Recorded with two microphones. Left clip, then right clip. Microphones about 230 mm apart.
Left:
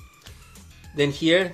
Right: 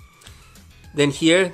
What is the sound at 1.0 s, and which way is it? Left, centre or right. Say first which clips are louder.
Speech: right 3 dB; right.